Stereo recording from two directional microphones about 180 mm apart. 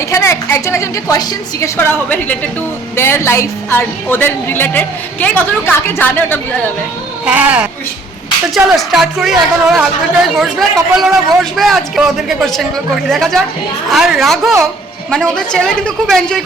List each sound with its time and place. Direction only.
0.0 s a woman's voice: 15° left (ahead or behind)
7.3 s a woman's voice: 5° right (ahead or behind)